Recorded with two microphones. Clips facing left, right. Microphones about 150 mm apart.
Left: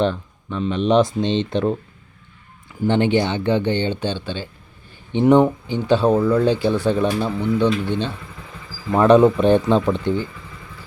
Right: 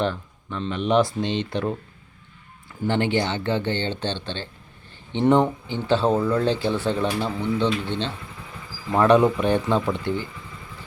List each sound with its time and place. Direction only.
0.0 s speech: 15° left (ahead or behind)
2.8 s speech: 20° left (ahead or behind)